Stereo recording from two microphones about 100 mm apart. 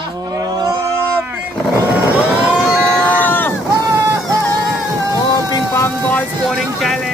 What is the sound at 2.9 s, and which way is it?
Run, 20° right (ahead or behind).